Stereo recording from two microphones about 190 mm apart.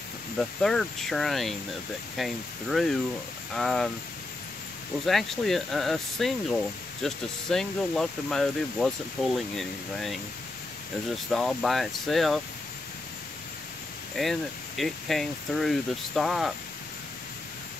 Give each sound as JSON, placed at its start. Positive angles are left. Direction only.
{"t": 0.4, "sound": "speech", "side_deg": 0}
{"t": 5.0, "sound": "speech", "side_deg": 0}
{"t": 11.3, "sound": "speech", "side_deg": 0}
{"t": 14.1, "sound": "speech", "side_deg": 0}